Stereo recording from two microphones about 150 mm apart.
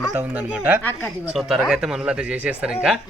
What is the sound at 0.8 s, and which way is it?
Speech, 10° left (ahead or behind).